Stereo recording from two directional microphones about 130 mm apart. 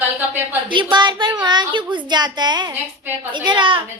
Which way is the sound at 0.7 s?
40° right (ahead or behind).